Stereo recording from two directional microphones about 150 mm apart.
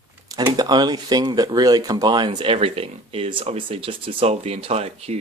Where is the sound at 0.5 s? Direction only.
25° right (ahead or behind).